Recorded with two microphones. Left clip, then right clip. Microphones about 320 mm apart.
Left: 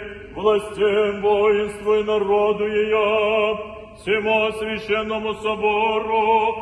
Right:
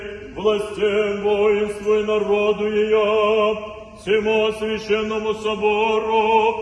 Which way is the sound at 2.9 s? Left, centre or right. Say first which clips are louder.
Right 2 dB; centre.